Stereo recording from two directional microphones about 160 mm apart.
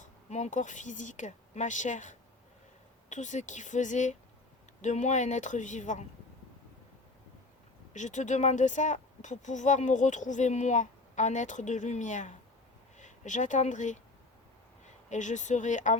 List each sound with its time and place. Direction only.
0.0 s speech: 45° left (ahead or behind)
7.9 s speech: 50° left (ahead or behind)
15.1 s speech: 50° left (ahead or behind)